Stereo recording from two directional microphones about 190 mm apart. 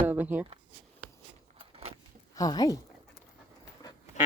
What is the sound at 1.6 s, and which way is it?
Vehicle, 30° right (ahead or behind).